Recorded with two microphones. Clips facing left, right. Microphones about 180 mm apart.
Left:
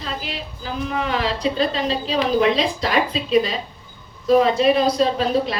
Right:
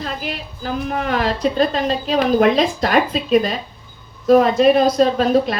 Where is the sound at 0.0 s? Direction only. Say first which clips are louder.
Right 3 dB; 50° right (ahead or behind).